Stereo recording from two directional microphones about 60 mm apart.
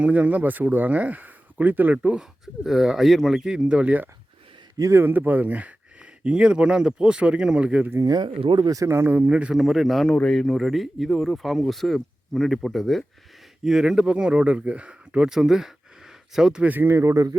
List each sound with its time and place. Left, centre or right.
0.0 s speech: right
2.6 s speech: centre
3.4 s speech: centre
4.8 s a man's voice: right
5.0 s speech: right
8.6 s speech: right
8.9 s speech: right
9.1 s speech: right
9.6 s speech: centre
10.6 s speech: centre
13.7 s speech: centre
16.8 s speech: right